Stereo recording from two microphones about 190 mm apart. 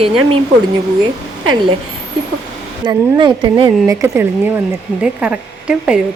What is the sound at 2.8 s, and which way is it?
Speech, 25° right (ahead or behind).